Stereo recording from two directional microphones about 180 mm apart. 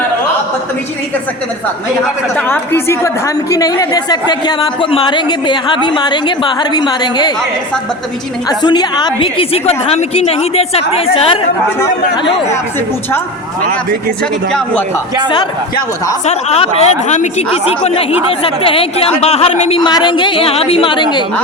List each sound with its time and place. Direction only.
2.3 s a woman's voice: 10° left (ahead or behind)
8.4 s a woman's voice: 25° left (ahead or behind)
16.2 s a woman's voice: 35° left (ahead or behind)
19.8 s speech: 25° left (ahead or behind)